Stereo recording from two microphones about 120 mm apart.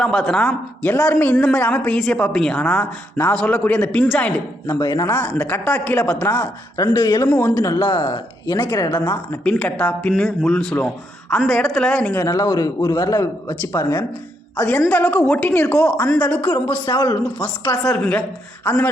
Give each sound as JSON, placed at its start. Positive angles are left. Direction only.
{"t": 0.0, "sound": "speech", "side_deg": 5}
{"t": 4.6, "sound": "a man's voice", "side_deg": 25}
{"t": 5.0, "sound": "a man's voice", "side_deg": 15}
{"t": 8.5, "sound": "a man's voice", "side_deg": 20}
{"t": 9.4, "sound": "speech", "side_deg": 10}
{"t": 12.1, "sound": "a man's voice", "side_deg": 25}
{"t": 15.9, "sound": "speech", "side_deg": 10}
{"t": 16.8, "sound": "a man's voice", "side_deg": 30}
{"t": 17.4, "sound": "speech", "side_deg": 10}